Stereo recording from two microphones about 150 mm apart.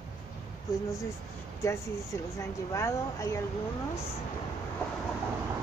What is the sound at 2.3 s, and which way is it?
Speech, 20° left (ahead or behind).